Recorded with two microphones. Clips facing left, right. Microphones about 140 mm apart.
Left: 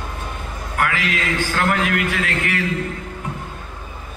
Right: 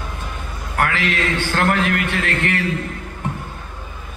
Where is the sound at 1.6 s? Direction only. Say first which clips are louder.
Right 1 dB; 40° right (ahead or behind).